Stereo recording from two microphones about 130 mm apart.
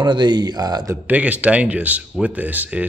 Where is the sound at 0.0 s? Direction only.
35° right (ahead or behind).